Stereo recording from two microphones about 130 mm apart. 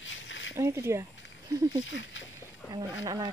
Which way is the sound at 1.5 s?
25° right (ahead or behind).